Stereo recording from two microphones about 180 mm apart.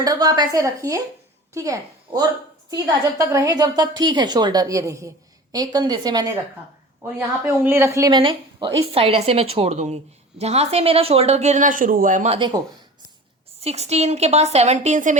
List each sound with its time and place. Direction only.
0.0 s a woman's voice: 20° right (ahead or behind); by 12.4 s 40° right (ahead or behind)
12.4 s a woman's voice: 25° right (ahead or behind)
13.6 s a woman's voice: 35° right (ahead or behind)